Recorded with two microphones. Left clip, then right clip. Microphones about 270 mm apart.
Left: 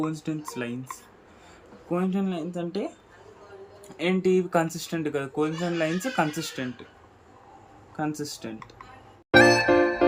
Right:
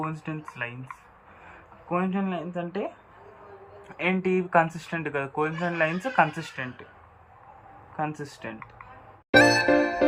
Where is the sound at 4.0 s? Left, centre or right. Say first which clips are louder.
Left 2 dB; left.